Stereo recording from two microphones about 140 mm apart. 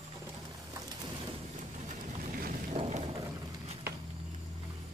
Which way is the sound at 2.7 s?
50° right (ahead or behind).